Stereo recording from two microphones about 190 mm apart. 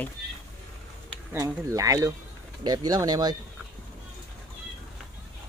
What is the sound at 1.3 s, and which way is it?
Speech, 15° right (ahead or behind).